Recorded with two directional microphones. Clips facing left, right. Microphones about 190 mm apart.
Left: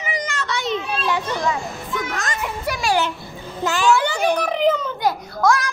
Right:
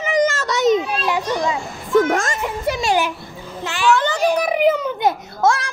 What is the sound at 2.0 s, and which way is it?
Speech, 50° right (ahead or behind).